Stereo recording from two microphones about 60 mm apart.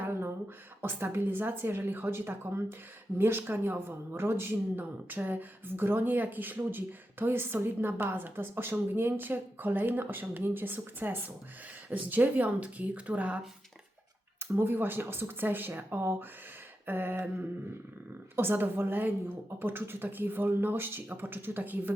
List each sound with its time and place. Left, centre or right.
0.0 s a sound: right
0.8 s speech: right
4.8 s speech: right
14.5 s speech: right
18.3 s speech: right